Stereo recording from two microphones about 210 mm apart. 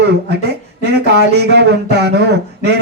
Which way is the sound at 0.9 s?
55° right (ahead or behind).